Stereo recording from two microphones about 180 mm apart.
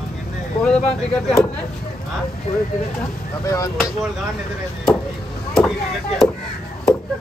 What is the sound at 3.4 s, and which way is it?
Speech, 15° left (ahead or behind).